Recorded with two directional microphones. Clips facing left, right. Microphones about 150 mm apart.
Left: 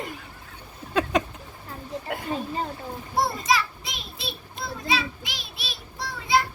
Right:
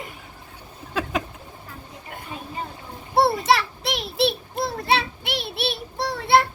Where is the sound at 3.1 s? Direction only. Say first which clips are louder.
Right 5 dB; 65° right (ahead or behind).